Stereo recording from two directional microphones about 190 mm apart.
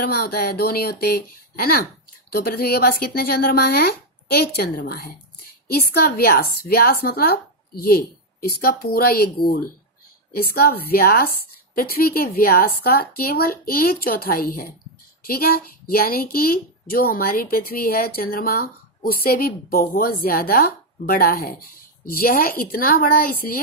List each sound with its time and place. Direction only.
0.1 s a woman's voice: 55° left (ahead or behind)
10.3 s a woman's voice: 55° left (ahead or behind)